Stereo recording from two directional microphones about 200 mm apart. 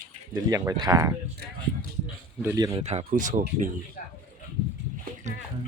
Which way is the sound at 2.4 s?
15° right (ahead or behind).